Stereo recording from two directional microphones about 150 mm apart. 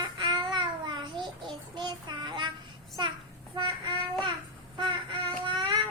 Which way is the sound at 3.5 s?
30° right (ahead or behind).